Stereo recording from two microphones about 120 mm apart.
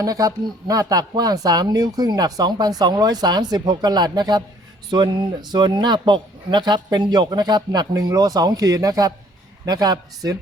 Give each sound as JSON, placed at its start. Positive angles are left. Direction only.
{"t": 0.0, "sound": "speech", "side_deg": -30}